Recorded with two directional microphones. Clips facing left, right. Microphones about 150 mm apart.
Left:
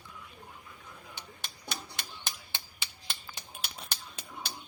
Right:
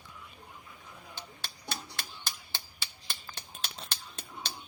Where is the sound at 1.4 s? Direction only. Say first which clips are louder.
Even; 15° left (ahead or behind).